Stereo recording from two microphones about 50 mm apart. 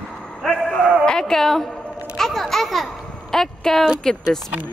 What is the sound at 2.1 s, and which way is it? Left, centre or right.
A child's voice, centre.